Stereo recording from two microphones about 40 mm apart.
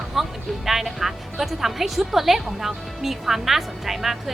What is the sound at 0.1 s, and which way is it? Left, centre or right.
Speech, centre.